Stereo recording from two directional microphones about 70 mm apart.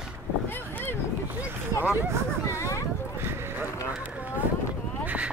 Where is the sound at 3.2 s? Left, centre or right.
Right.